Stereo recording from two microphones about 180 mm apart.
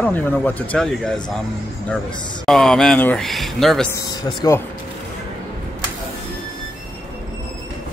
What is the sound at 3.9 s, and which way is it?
Speech, 20° left (ahead or behind).